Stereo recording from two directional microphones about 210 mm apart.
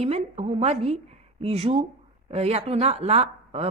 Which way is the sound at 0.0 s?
30° right (ahead or behind).